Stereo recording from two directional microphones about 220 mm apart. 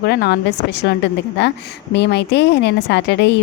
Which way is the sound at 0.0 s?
45° left (ahead or behind).